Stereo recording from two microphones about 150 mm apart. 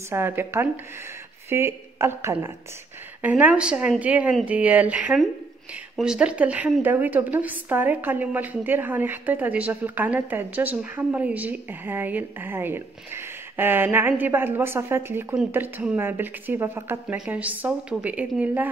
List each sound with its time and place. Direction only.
0.1 s a woman's voice: 15° right (ahead or behind)